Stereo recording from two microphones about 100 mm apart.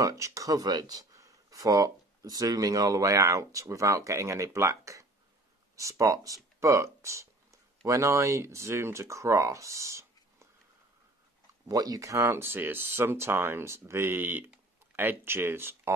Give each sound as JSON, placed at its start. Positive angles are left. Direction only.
{"t": 0.0, "sound": "speech", "side_deg": -30}
{"t": 11.6, "sound": "speech", "side_deg": -40}